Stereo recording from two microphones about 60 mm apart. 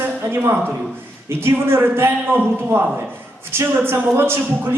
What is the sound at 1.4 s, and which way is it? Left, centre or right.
Speech, right.